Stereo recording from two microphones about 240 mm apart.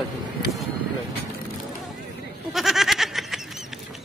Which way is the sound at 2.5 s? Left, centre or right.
Centre.